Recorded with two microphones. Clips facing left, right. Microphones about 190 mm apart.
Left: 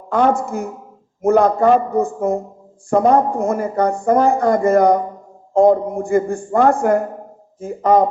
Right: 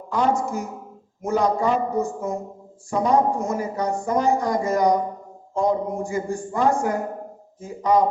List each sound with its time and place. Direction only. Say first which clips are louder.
0.1 s speech: left 5 dB; 55° left (ahead or behind)